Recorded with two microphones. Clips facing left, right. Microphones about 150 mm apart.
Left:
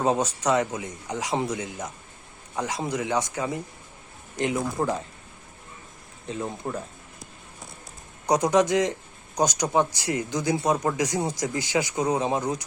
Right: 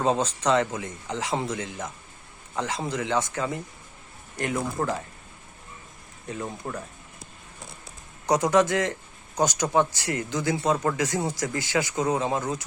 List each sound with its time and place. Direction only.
0.0 s speech: 10° left (ahead or behind)
6.2 s speech: 20° left (ahead or behind)
8.3 s speech: 15° left (ahead or behind)